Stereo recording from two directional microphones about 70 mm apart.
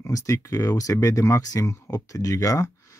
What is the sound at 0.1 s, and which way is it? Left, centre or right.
Speech, left.